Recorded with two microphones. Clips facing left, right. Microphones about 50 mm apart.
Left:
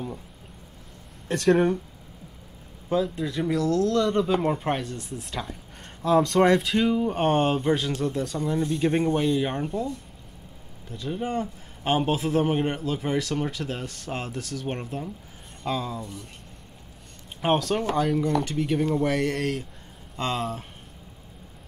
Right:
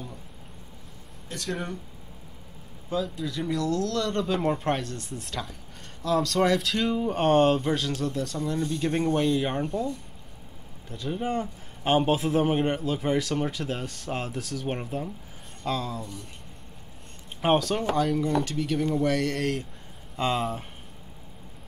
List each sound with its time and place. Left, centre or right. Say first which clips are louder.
1.3 s speech: left 12 dB; left
2.9 s speech: left 4 dB; centre
3.3 s a man's voice: left 3 dB; left; by 16.2 s centre
17.4 s a man's voice: even; centre
18.4 s a man's voice: left 2 dB; centre